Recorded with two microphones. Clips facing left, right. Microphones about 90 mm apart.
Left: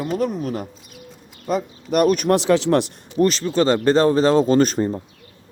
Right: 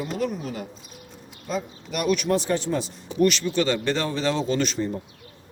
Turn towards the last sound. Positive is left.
turn(degrees=45)  # may be behind; listen again after turning